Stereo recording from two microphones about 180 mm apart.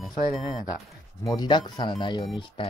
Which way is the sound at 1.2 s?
20° left (ahead or behind).